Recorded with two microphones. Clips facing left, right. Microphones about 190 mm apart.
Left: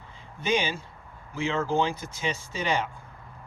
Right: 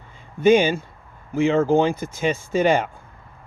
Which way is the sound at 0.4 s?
50° right (ahead or behind).